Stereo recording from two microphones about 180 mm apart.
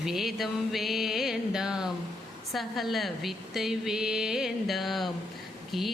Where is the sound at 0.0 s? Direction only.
Centre (ahead or behind).